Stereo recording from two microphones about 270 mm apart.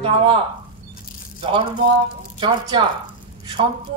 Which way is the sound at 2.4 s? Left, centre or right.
Centre.